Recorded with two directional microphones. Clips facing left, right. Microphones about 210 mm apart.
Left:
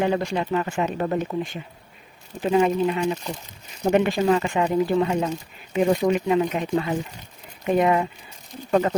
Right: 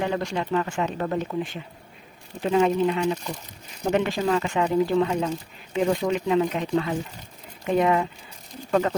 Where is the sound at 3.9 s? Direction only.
15° left (ahead or behind).